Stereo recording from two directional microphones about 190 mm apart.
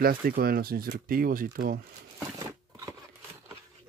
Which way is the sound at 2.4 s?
20° right (ahead or behind).